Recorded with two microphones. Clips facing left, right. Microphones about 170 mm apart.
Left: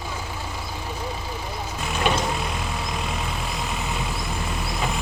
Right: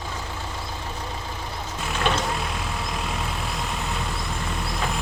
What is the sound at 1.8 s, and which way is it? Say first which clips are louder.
Vehicle: left 1 dB; 5° left (ahead or behind).